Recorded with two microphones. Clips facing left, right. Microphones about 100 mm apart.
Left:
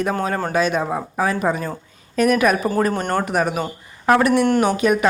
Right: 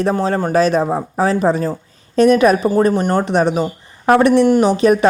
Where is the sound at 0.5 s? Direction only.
35° right (ahead or behind).